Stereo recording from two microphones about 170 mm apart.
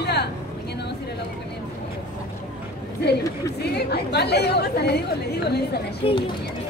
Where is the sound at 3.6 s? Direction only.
75° left (ahead or behind).